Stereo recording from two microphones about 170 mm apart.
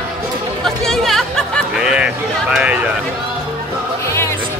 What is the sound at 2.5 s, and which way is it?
Speech, 5° right (ahead or behind).